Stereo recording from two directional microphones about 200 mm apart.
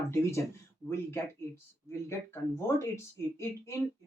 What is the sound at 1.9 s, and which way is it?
Speech, 15° left (ahead or behind).